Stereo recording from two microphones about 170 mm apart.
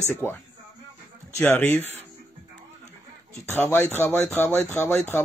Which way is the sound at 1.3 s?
10° left (ahead or behind).